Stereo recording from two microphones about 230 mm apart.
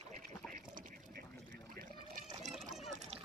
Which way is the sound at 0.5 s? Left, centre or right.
Right.